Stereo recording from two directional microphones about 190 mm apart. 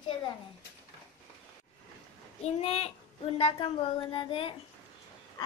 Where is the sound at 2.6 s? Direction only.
35° left (ahead or behind).